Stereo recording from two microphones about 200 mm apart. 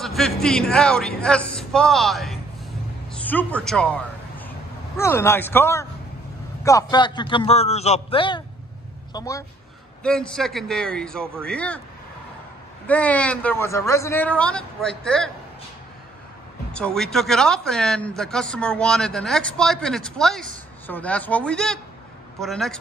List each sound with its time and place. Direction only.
0.0 s speech: centre (ahead or behind)
3.1 s a sound: 5° left (ahead or behind)
4.9 s a man's voice: 15° left (ahead or behind)
10.0 s speech: 5° left (ahead or behind)
12.8 s speech: 5° left (ahead or behind)
16.7 s speech: 5° left (ahead or behind)